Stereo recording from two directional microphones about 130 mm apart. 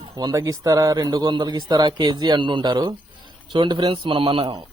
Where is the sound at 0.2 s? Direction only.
30° right (ahead or behind).